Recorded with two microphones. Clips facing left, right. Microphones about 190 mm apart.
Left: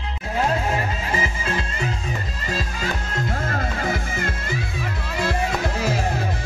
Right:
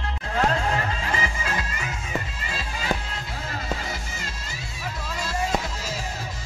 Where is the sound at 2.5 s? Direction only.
45° left (ahead or behind).